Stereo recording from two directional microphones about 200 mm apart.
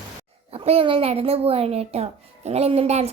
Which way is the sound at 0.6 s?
30° right (ahead or behind).